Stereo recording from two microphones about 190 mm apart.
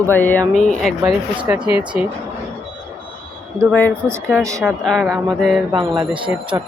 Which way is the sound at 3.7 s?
10° left (ahead or behind).